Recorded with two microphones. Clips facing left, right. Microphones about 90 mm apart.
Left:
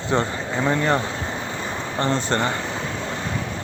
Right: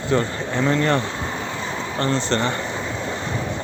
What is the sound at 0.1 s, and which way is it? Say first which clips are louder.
Speech: right 1 dB; 20° left (ahead or behind).